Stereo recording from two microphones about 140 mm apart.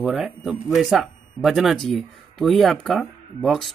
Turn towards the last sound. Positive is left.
turn(degrees=0)  # may be behind; listen again after turning